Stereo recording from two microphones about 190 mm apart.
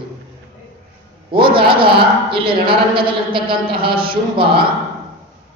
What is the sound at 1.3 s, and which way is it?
A woman's voice, 25° right (ahead or behind).